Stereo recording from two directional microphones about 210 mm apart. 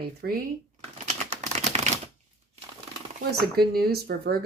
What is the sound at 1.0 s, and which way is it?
Typewriter, 30° right (ahead or behind).